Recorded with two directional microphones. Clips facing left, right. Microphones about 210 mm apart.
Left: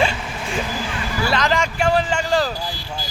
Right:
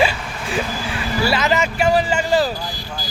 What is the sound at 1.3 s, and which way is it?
Speech, 5° right (ahead or behind).